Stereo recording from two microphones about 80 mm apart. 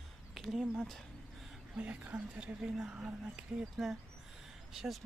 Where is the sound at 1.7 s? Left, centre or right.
Centre.